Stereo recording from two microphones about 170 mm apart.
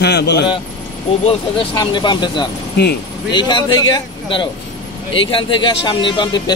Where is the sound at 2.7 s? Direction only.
70° left (ahead or behind).